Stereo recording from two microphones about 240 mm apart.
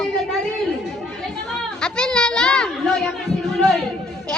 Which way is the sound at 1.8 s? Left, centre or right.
Centre.